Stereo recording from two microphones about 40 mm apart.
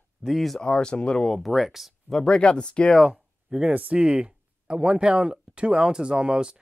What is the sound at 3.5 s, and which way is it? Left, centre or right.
Speech, centre.